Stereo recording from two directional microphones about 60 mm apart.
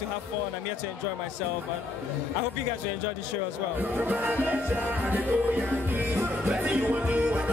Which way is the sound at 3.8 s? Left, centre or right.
Right.